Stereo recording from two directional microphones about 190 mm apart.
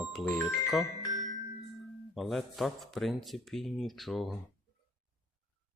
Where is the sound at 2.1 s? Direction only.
Centre (ahead or behind).